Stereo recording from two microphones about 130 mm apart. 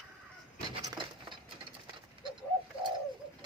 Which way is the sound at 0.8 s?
35° right (ahead or behind).